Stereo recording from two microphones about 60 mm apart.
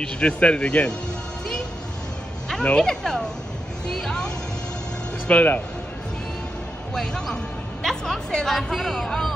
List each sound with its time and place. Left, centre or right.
0.0 s speech: centre
2.6 s speech: centre
3.8 s music: centre
5.3 s a man's voice: left
6.9 s speech: centre